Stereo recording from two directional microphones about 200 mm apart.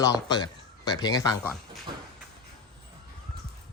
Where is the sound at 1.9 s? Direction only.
25° right (ahead or behind).